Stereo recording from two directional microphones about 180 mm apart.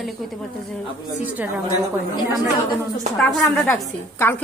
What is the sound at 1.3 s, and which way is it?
Speech, 10° right (ahead or behind).